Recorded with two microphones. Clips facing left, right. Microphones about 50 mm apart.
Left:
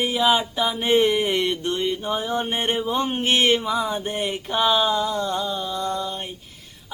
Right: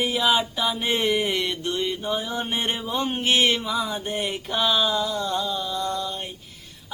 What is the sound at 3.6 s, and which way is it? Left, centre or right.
Mantra, centre.